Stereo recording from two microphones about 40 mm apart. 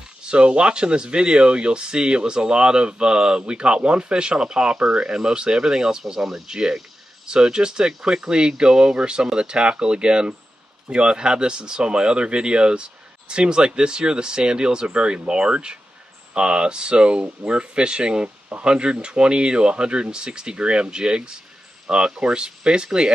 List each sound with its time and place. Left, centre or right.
0.2 s speech: right